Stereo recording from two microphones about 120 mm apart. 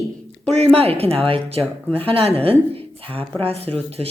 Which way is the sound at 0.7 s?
55° right (ahead or behind).